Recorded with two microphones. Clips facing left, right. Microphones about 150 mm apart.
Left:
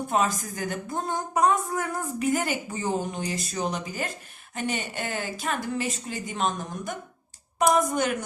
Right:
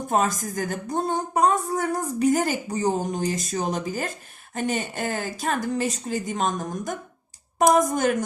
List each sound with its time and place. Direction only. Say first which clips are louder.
0.1 s a woman's voice: right 3 dB; 40° right (ahead or behind)